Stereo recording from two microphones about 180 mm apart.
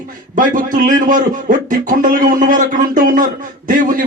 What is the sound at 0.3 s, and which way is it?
A man's voice, 50° right (ahead or behind).